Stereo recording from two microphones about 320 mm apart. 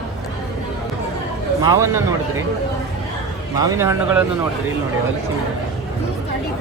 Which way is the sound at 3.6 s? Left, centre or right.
Centre.